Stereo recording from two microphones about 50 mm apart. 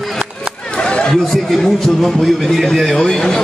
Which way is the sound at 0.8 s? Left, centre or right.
Centre.